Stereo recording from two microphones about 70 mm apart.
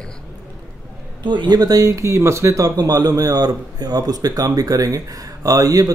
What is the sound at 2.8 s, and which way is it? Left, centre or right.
A man's voice, right.